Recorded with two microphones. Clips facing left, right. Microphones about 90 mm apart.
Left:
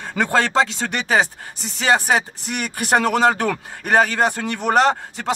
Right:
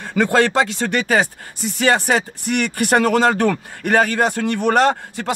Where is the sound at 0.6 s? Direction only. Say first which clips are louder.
Right 1 dB; 25° left (ahead or behind).